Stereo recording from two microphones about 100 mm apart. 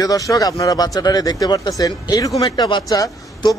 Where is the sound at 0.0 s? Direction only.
35° left (ahead or behind).